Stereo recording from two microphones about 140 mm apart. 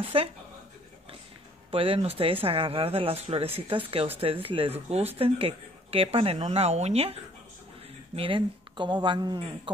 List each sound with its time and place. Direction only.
0.1 s speech: 40° right (ahead or behind)
1.7 s speech: 40° right (ahead or behind)
8.2 s speech: 40° right (ahead or behind)